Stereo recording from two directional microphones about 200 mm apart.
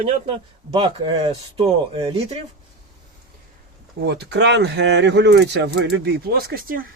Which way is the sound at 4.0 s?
55° right (ahead or behind).